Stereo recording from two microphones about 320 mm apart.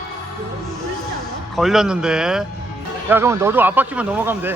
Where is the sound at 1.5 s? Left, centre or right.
Centre.